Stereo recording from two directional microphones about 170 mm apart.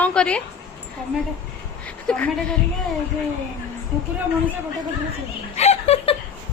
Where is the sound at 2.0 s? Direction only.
5° left (ahead or behind).